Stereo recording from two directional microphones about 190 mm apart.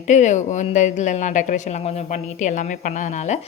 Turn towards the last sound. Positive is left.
turn(degrees=40)  # may be behind; listen again after turning